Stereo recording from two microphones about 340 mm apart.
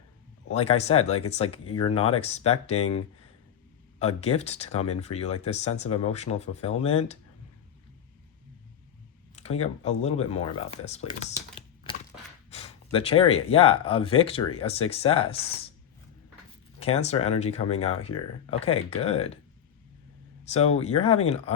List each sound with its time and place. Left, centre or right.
0.5 s speech: centre
4.0 s speech: centre
9.3 s speech: centre
16.8 s speech: centre
18.1 s speech: left
18.6 s speech: centre
20.4 s speech: centre